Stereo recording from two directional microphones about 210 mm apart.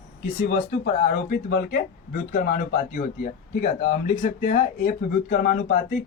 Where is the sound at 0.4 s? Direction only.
45° left (ahead or behind).